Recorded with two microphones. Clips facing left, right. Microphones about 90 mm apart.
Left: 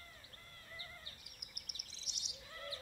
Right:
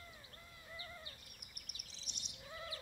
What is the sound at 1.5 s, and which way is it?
Bird vocalization, 40° right (ahead or behind).